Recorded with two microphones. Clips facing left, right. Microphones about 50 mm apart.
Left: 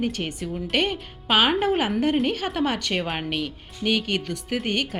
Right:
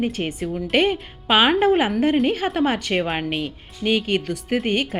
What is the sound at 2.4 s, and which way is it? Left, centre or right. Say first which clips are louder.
A woman's voice: right 4 dB; centre.